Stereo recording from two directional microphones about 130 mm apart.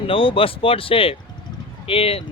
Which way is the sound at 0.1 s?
45° left (ahead or behind).